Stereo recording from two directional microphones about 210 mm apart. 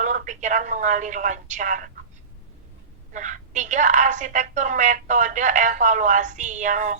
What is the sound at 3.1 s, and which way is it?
A woman's voice, 35° right (ahead or behind).